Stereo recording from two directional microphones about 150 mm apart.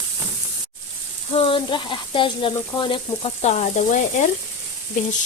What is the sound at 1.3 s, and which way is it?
Speech, 35° left (ahead or behind).